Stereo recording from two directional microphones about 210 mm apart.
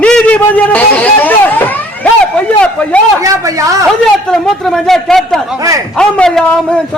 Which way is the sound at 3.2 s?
15° right (ahead or behind).